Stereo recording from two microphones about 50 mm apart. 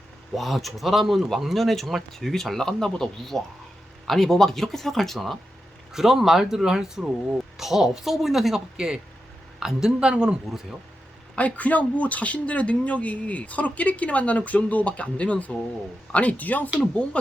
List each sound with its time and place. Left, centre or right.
0.3 s speech: centre
11.3 s speech: left